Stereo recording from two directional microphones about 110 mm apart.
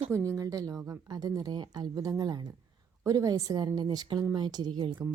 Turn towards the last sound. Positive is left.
turn(degrees=-45)  # may be behind; listen again after turning